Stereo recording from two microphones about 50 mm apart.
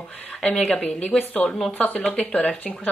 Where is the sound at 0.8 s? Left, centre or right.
Left.